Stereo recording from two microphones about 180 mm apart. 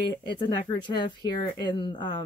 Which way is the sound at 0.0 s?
25° left (ahead or behind).